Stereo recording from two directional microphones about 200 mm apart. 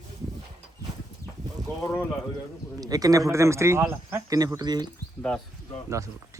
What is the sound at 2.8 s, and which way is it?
Speech, 20° right (ahead or behind).